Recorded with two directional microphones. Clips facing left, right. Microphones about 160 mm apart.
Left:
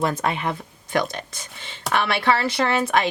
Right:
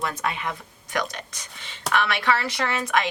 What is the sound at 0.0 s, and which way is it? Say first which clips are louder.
Speech: left 5 dB; 30° left (ahead or behind).